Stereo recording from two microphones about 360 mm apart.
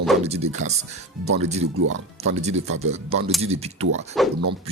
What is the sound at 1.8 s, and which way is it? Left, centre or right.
Speech, right.